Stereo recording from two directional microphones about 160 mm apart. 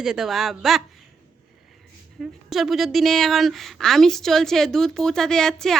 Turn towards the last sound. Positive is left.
turn(degrees=5)  # may be behind; listen again after turning